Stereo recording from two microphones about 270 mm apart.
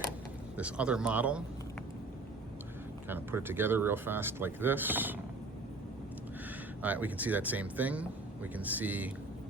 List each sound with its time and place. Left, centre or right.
0.5 s speech: centre
3.1 s speech: centre
6.8 s speech: centre